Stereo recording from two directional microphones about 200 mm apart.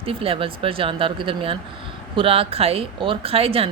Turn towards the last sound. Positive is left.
turn(degrees=-30)  # may be behind; listen again after turning